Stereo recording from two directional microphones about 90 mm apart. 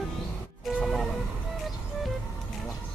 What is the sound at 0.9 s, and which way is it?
Music, centre (ahead or behind).